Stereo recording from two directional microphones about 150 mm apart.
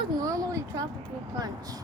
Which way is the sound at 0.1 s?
25° right (ahead or behind).